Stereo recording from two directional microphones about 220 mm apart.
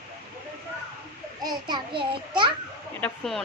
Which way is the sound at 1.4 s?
20° right (ahead or behind).